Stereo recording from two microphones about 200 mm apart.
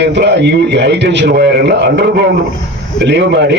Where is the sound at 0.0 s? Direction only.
60° right (ahead or behind).